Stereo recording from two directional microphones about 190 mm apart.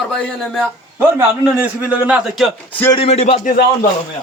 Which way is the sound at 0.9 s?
10° right (ahead or behind).